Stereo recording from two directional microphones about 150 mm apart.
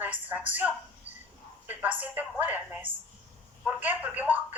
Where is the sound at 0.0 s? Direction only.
10° right (ahead or behind).